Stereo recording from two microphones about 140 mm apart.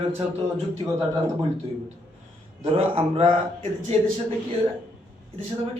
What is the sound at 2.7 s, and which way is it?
Speech, 45° right (ahead or behind).